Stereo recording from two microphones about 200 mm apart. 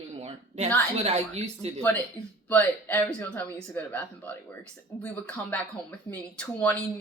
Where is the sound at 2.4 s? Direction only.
10° left (ahead or behind).